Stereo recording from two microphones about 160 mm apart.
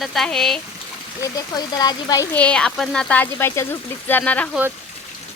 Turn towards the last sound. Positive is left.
turn(degrees=10)  # may be behind; listen again after turning